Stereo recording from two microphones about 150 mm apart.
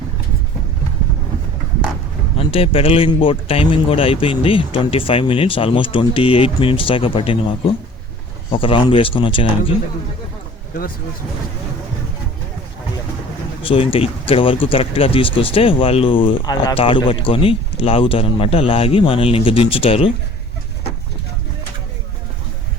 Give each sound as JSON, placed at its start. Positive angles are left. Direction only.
{"t": 2.5, "sound": "speech", "side_deg": 40}
{"t": 13.6, "sound": "speech", "side_deg": 35}